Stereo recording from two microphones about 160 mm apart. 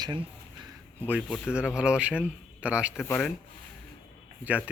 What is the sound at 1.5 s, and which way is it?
A man's voice, 5° right (ahead or behind).